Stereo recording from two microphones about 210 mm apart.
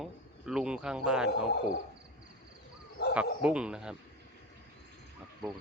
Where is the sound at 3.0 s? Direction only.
50° left (ahead or behind).